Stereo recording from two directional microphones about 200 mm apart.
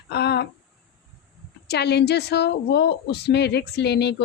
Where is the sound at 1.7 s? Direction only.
55° left (ahead or behind).